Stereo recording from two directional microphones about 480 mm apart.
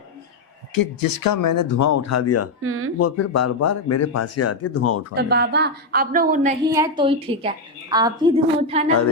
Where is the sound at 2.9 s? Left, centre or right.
Left.